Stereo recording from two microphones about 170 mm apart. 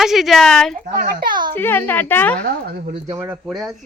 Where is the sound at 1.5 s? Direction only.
10° left (ahead or behind).